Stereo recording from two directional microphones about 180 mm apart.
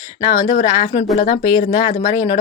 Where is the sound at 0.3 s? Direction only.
45° left (ahead or behind).